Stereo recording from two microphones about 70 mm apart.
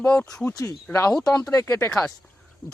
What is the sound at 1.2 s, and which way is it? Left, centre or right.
Speech, left.